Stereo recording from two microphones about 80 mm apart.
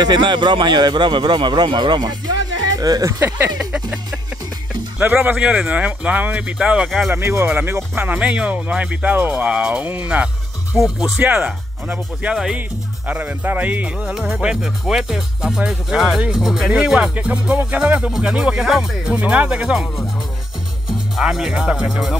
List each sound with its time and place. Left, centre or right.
0.0 s a man's voice: right
2.7 s speech: right
3.2 s speech: right
3.5 s speech: centre
7.1 s speech: right; by 10.8 s centre
10.8 s speech: centre
11.1 s speech: right
11.4 s speech: centre
21.2 s speech: centre